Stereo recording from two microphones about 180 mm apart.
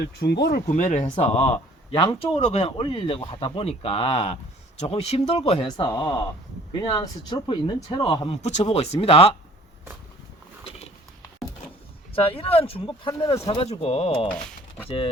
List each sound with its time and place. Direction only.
0.0 s speech: 65° left (ahead or behind)
0.7 s speech: 40° left (ahead or behind)
5.6 s speech: 25° left (ahead or behind)
6.9 s speech: 25° left (ahead or behind)
12.1 s speech: 30° left (ahead or behind)